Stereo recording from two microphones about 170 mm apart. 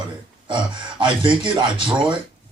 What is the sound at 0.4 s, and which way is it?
Speech, 30° right (ahead or behind).